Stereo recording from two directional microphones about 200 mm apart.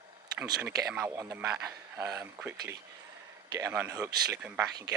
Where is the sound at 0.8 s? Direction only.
5° right (ahead or behind).